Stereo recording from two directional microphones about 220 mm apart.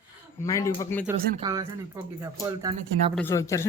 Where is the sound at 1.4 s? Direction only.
15° right (ahead or behind).